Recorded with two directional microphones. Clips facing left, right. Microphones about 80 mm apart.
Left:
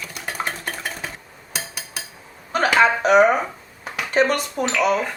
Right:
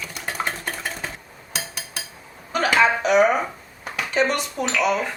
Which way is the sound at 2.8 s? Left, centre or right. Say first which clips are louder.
Left 3 dB; left.